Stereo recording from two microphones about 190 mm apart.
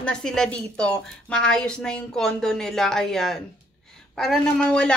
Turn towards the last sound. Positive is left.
turn(degrees=5)  # may be behind; listen again after turning